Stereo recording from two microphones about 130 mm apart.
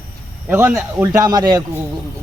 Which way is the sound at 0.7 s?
25° right (ahead or behind).